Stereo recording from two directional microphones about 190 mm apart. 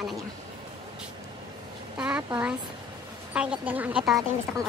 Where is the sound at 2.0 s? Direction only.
5° right (ahead or behind).